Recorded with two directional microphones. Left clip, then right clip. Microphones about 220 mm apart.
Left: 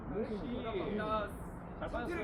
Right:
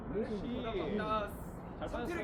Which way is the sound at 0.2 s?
35° right (ahead or behind).